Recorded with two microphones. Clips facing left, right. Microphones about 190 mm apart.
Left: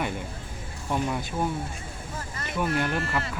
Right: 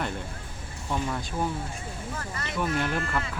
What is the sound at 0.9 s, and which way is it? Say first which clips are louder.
Speech: left 2 dB; 15° left (ahead or behind).